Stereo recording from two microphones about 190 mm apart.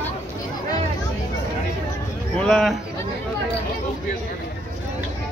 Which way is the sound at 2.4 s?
Centre (ahead or behind).